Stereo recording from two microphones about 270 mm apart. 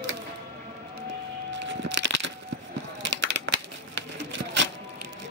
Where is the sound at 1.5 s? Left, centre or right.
Right.